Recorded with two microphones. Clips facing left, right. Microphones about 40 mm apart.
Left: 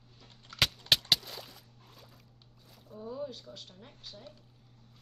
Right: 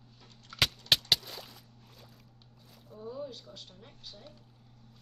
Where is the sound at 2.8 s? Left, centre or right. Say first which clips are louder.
Left 1 dB; centre.